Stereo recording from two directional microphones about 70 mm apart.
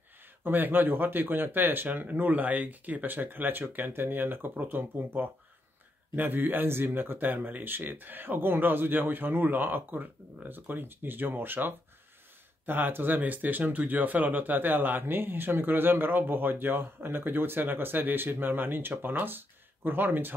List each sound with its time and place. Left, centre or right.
0.4 s speech: right